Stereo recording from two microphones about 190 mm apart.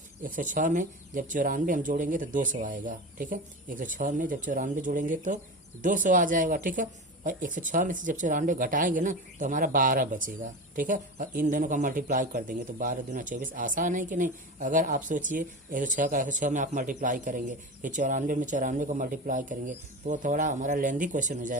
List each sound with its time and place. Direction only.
0.2 s speech: 45° right (ahead or behind)